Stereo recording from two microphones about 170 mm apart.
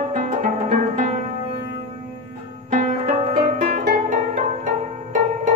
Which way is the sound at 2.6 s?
45° right (ahead or behind).